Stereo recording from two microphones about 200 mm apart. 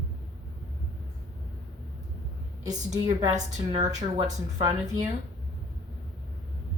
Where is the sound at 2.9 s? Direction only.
20° right (ahead or behind).